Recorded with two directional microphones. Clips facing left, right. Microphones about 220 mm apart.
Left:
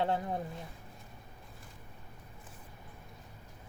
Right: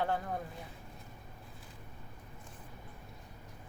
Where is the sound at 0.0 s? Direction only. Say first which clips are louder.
Left 2 dB; 25° left (ahead or behind).